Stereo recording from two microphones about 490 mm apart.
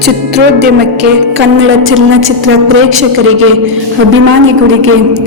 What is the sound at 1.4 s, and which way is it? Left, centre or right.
A woman's voice, right.